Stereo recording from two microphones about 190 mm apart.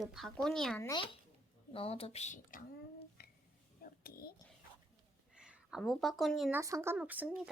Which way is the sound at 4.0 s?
50° left (ahead or behind).